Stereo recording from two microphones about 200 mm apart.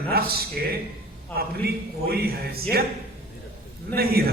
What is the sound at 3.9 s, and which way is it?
Speech, 50° right (ahead or behind).